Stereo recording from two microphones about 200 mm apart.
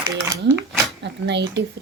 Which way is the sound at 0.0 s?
15° right (ahead or behind).